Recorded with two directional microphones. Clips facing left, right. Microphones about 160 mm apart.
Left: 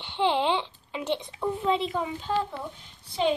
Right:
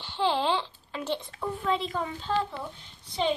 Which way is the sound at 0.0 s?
20° left (ahead or behind).